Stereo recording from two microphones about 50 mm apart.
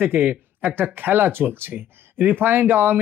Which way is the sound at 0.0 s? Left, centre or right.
Right.